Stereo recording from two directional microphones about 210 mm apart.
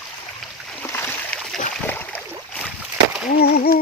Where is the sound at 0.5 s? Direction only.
5° left (ahead or behind).